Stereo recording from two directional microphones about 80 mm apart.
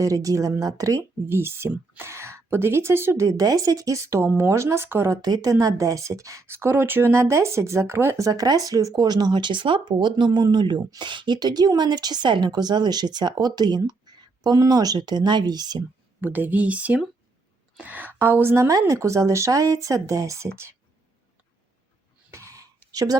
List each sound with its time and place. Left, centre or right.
0.0 s speech: right
1.3 s a woman's voice: right
5.2 s a woman's voice: right
8.3 s speech: right
16.2 s a woman's voice: right
22.3 s a sound: right